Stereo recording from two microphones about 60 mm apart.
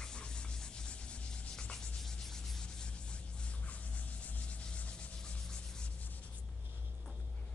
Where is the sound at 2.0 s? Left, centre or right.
Centre.